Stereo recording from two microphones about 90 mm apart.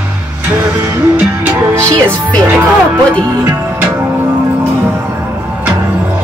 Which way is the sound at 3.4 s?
30° right (ahead or behind).